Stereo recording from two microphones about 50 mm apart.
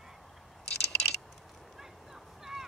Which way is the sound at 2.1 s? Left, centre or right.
Centre.